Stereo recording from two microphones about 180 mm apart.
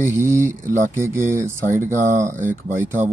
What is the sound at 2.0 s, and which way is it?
Speech, 45° right (ahead or behind).